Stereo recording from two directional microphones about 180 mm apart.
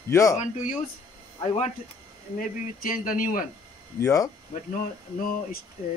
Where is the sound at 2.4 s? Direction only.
50° left (ahead or behind).